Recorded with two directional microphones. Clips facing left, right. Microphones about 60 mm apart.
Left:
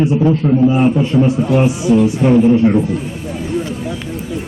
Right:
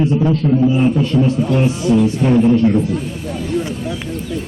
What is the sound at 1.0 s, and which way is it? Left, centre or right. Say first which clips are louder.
A man's voice: left 2 dB; centre.